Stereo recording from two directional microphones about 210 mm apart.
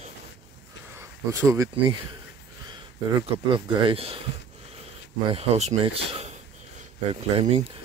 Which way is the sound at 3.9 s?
25° right (ahead or behind).